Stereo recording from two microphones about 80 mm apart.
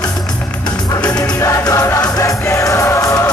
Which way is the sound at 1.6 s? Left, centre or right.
Left.